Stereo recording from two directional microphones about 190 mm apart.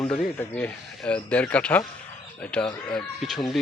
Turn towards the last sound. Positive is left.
turn(degrees=0)  # may be behind; listen again after turning